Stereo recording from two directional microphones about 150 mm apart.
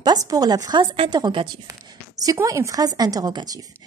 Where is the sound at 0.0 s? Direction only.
25° right (ahead or behind).